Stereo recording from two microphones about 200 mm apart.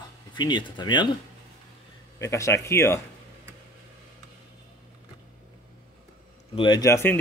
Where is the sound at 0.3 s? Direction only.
25° left (ahead or behind).